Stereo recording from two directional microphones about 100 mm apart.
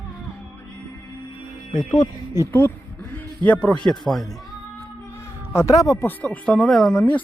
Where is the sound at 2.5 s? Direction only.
20° left (ahead or behind).